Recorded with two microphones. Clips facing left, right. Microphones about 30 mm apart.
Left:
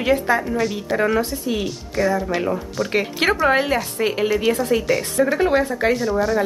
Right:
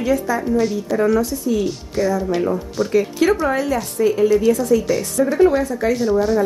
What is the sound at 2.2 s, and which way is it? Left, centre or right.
Speech, left.